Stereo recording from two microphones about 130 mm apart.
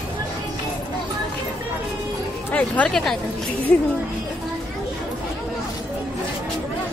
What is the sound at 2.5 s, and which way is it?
Speech, 10° left (ahead or behind).